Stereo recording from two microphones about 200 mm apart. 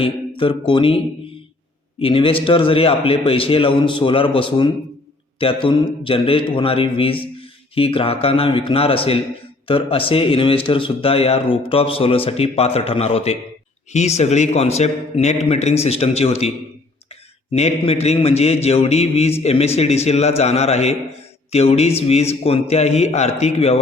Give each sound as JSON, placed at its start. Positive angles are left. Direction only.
{"t": 0.0, "sound": "speech", "side_deg": 25}
{"t": 2.0, "sound": "a man's voice", "side_deg": 25}
{"t": 17.5, "sound": "a man's voice", "side_deg": 30}